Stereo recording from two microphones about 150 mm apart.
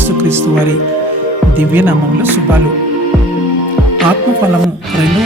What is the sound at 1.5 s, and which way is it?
Speech, 10° right (ahead or behind).